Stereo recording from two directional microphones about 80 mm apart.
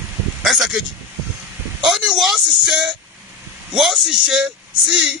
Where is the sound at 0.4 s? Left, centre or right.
Centre.